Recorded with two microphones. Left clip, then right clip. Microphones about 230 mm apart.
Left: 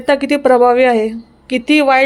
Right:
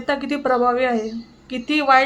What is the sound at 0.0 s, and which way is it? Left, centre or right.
Speech, left.